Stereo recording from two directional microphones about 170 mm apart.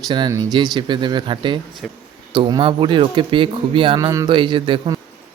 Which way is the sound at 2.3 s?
30° right (ahead or behind).